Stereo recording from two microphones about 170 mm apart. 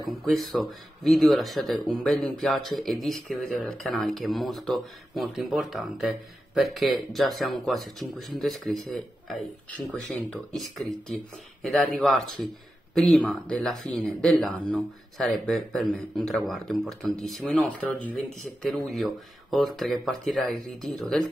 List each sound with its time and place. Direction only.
0.2 s speech: centre (ahead or behind)